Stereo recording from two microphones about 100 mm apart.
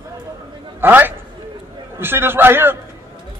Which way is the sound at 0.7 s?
20° right (ahead or behind).